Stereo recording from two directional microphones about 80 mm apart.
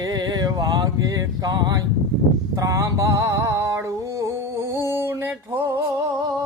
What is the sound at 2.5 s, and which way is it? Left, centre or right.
Music, right.